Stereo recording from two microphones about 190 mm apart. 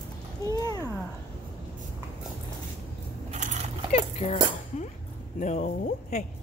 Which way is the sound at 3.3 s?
40° right (ahead or behind).